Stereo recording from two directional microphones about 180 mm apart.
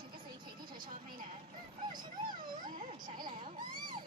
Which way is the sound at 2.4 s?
50° right (ahead or behind).